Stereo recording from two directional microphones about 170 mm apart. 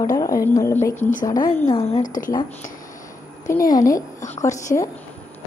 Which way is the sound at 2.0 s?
50° left (ahead or behind).